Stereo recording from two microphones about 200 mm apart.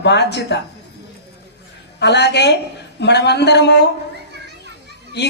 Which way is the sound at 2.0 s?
55° left (ahead or behind).